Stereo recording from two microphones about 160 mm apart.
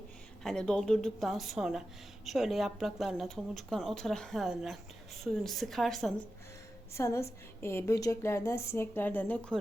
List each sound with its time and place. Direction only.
0.4 s speech: 5° left (ahead or behind)
6.9 s a woman's voice: 15° left (ahead or behind)